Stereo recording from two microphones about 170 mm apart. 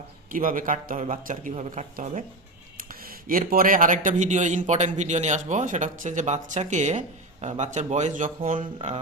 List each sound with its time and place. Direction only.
0.3 s speech: 55° right (ahead or behind)
2.7 s speech: 60° right (ahead or behind)